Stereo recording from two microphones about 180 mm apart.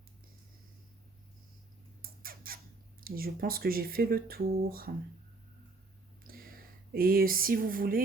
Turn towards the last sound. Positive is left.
turn(degrees=-50)  # may be behind; listen again after turning